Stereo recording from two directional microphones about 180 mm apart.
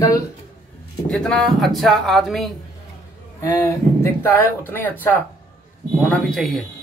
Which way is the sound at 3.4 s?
15° left (ahead or behind).